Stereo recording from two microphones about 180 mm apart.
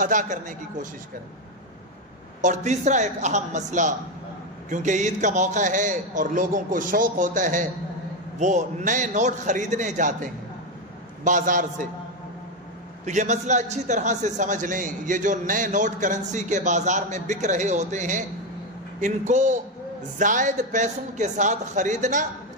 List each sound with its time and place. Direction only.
0.0 s a man's voice: 45° right (ahead or behind)
2.4 s a woman's voice: 40° right (ahead or behind)
13.0 s a man's voice: 40° right (ahead or behind)